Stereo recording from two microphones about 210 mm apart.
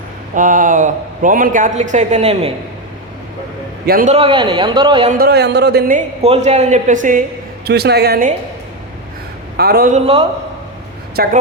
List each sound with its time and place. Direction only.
0.3 s speech: 40° right (ahead or behind)
3.8 s speech: 45° right (ahead or behind)
4.1 s speech: 25° right (ahead or behind)
5.1 s speech: 50° right (ahead or behind)
6.2 s speech: 30° right (ahead or behind)
7.6 s speech: 50° right (ahead or behind)
9.6 s speech: 50° right (ahead or behind)
9.9 s speech: 30° right (ahead or behind)
11.2 s speech: 50° right (ahead or behind)